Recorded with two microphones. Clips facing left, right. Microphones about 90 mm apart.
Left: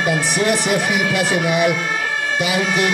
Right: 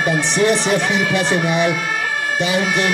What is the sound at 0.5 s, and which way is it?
A man's voice, 30° right (ahead or behind).